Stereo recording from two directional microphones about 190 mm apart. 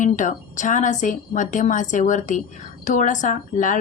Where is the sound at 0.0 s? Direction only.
40° left (ahead or behind).